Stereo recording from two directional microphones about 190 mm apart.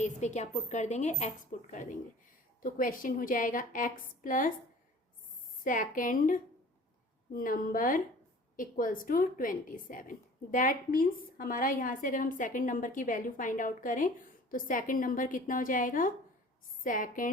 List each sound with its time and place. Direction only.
0.0 s a woman's voice: 35° left (ahead or behind)
5.6 s a woman's voice: 45° left (ahead or behind)